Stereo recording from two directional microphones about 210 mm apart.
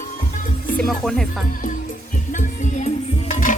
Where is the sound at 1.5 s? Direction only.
40° left (ahead or behind).